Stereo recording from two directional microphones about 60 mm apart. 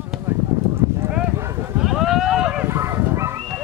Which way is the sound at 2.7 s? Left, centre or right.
Right.